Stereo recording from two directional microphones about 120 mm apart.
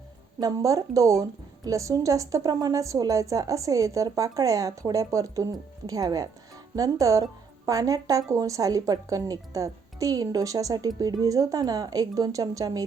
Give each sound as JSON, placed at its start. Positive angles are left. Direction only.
{"t": 0.3, "sound": "a woman's voice", "side_deg": -30}